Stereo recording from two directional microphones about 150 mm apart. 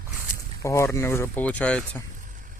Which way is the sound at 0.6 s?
20° left (ahead or behind).